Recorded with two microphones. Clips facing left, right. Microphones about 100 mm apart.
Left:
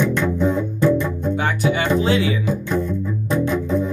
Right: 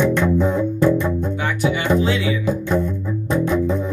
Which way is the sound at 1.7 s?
35° left (ahead or behind).